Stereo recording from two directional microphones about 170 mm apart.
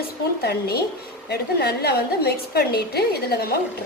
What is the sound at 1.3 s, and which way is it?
A woman's voice, 70° left (ahead or behind).